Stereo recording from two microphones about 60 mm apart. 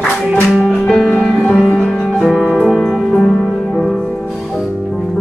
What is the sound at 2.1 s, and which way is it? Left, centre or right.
Music, centre.